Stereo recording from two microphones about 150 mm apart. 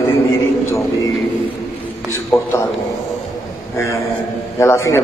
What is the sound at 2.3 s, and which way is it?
Speech, 15° left (ahead or behind).